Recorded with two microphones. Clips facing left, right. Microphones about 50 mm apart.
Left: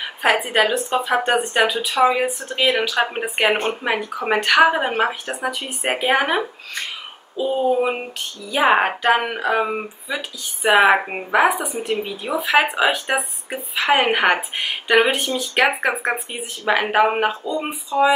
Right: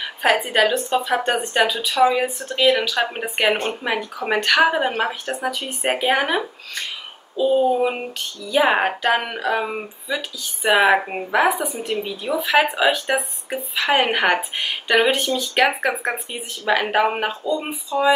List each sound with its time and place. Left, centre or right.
0.0 s a woman's voice: centre